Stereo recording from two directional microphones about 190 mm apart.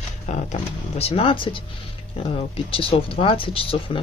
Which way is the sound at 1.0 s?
30° left (ahead or behind).